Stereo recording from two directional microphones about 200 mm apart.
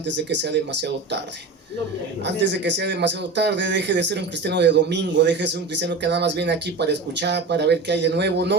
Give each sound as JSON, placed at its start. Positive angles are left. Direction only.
{"t": 0.3, "sound": "speech", "side_deg": -60}
{"t": 2.2, "sound": "speech", "side_deg": -60}